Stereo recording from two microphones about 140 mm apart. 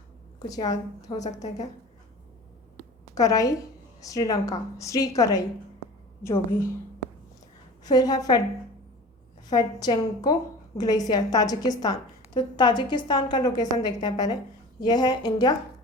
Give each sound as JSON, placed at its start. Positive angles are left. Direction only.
{"t": 0.3, "sound": "a woman's voice", "side_deg": 25}
{"t": 1.2, "sound": "a woman's voice", "side_deg": 55}
{"t": 3.2, "sound": "a woman's voice", "side_deg": 25}
{"t": 7.9, "sound": "a woman's voice", "side_deg": 30}
{"t": 9.5, "sound": "a woman's voice", "side_deg": 30}